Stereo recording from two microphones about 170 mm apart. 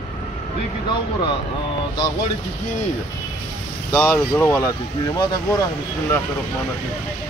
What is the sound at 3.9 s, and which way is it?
Speech, 10° left (ahead or behind).